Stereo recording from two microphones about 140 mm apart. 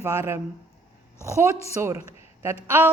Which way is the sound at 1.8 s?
20° right (ahead or behind).